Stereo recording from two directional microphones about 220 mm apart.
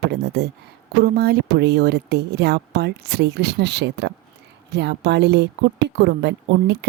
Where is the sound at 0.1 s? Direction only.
50° right (ahead or behind).